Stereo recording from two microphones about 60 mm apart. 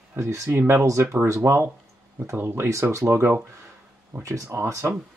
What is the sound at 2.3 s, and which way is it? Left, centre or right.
Speech, right.